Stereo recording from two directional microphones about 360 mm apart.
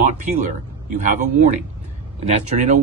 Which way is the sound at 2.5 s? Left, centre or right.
Centre.